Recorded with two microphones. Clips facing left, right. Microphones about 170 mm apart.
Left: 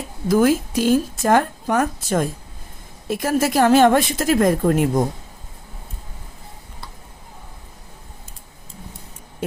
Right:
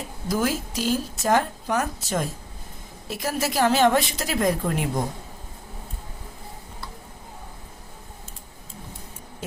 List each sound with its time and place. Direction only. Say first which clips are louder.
0.3 s speech: left 9 dB; 55° left (ahead or behind)